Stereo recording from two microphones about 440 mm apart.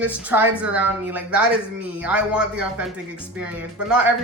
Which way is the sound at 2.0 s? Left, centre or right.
Centre.